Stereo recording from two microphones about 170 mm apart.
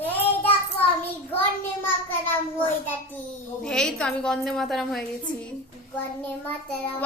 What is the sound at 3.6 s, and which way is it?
A woman's voice, 5° left (ahead or behind).